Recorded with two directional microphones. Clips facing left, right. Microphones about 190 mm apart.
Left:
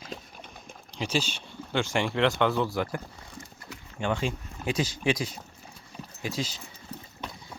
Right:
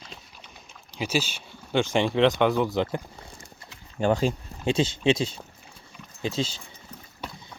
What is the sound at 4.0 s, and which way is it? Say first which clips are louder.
Speech: right 6 dB; 40° right (ahead or behind).